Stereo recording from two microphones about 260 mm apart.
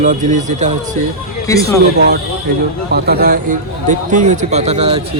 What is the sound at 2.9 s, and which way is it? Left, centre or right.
A man's voice, right.